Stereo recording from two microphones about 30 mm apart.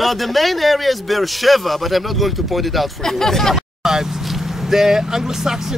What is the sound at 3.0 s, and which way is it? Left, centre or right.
Speech, centre.